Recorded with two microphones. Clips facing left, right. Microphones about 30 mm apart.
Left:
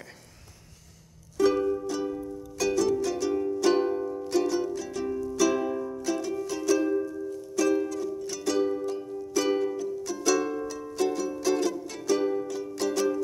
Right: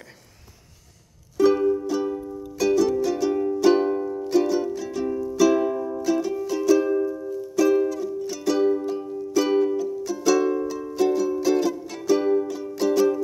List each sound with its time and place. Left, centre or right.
1.4 s music: centre
7.0 s music: right
7.2 s music: centre